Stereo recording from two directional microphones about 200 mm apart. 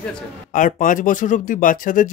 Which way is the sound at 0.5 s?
40° left (ahead or behind).